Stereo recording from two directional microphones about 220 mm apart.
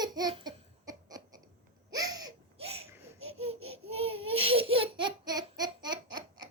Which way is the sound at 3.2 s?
25° right (ahead or behind).